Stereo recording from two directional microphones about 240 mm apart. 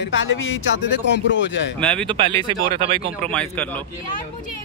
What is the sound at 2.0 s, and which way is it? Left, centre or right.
Speech, right.